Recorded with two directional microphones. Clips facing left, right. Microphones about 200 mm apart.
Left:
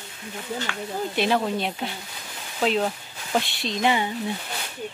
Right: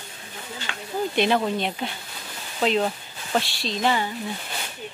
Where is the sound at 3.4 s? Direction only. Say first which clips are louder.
Left 1 dB; 20° left (ahead or behind).